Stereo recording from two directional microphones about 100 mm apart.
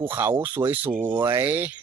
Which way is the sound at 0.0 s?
20° right (ahead or behind).